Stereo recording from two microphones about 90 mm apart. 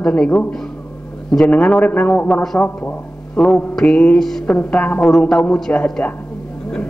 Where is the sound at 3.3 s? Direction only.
5° left (ahead or behind).